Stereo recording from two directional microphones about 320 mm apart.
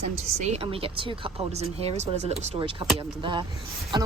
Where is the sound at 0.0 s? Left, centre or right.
Right.